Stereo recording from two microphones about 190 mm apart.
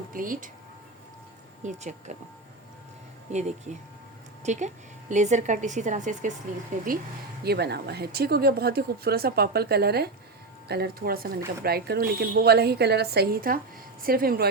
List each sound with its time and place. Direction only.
0.1 s speech: 45° right (ahead or behind)
1.6 s speech: 40° right (ahead or behind)
3.3 s speech: 35° right (ahead or behind)
7.4 s speech: 60° right (ahead or behind)